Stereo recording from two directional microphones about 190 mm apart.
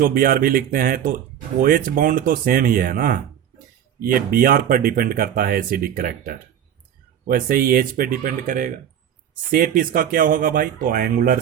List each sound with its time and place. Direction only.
0.0 s speech: 50° right (ahead or behind)